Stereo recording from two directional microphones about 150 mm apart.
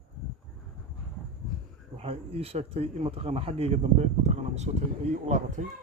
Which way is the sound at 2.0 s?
40° right (ahead or behind).